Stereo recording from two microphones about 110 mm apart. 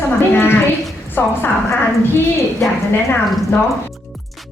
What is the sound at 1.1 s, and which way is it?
Speech, 20° left (ahead or behind).